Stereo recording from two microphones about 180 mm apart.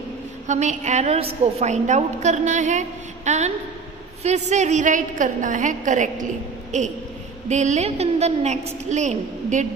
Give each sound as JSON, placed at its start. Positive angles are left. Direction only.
{"t": 0.5, "sound": "a woman's voice", "side_deg": -40}